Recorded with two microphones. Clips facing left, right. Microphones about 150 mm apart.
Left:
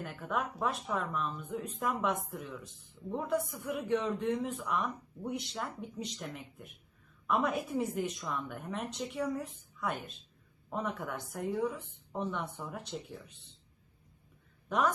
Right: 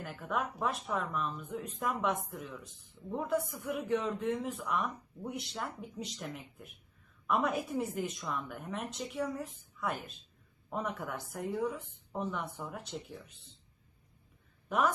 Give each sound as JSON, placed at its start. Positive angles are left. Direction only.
{"t": 0.0, "sound": "a man's voice", "side_deg": 0}
{"t": 14.7, "sound": "a woman's voice", "side_deg": -5}